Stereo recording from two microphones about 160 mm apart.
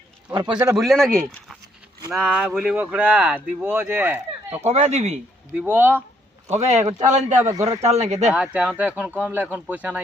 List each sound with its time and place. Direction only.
0.3 s a man's voice: 30° right (ahead or behind)
0.8 s speech: centre (ahead or behind)
4.6 s speech: 45° right (ahead or behind)
5.5 s speech: 10° right (ahead or behind)
6.5 s speech: 45° right (ahead or behind)
8.3 s speech: 5° right (ahead or behind)